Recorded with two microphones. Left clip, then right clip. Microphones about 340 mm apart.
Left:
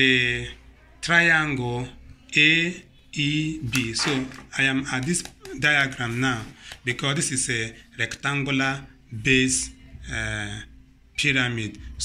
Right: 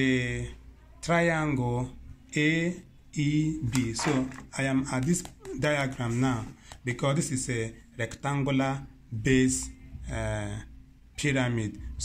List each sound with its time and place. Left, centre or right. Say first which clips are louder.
0.0 s speech: left 9 dB; right